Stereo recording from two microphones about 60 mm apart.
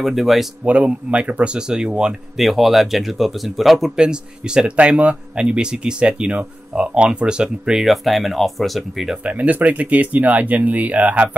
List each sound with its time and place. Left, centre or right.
0.0 s speech: centre
0.7 s speech: right
2.3 s speech: centre
3.9 s speech: centre
7.8 s speech: centre
9.2 s speech: right